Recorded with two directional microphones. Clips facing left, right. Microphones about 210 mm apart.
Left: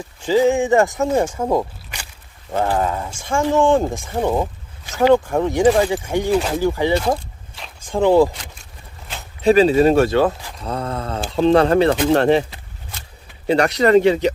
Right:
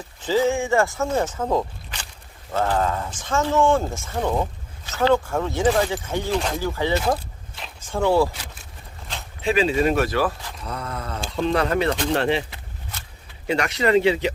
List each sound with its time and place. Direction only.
0.2 s speech: 15° left (ahead or behind)
9.4 s speech: 40° left (ahead or behind)
11.9 s speech: 45° left (ahead or behind)
13.5 s speech: 35° left (ahead or behind)